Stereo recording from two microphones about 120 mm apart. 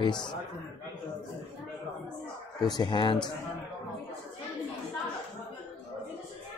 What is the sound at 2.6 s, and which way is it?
Speech, 35° left (ahead or behind).